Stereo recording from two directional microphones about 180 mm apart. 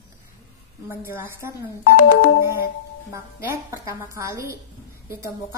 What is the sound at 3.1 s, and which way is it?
A woman's voice, 15° right (ahead or behind).